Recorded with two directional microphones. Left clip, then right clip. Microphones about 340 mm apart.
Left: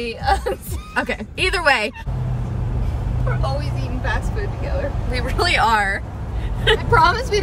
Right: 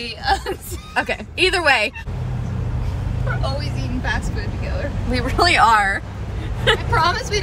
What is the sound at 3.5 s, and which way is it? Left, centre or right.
Speech, centre.